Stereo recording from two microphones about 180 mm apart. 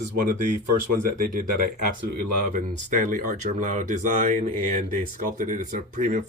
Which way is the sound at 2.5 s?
45° right (ahead or behind).